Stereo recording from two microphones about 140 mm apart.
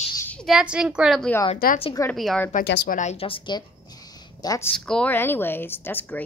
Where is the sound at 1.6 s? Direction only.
90° left.